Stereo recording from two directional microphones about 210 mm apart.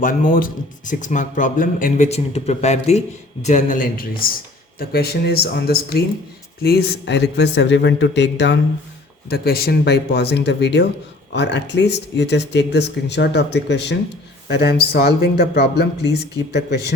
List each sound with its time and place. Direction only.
0.0 s speech: 40° left (ahead or behind)